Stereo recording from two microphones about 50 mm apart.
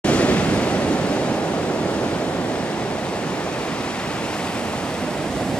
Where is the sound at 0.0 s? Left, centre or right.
Left.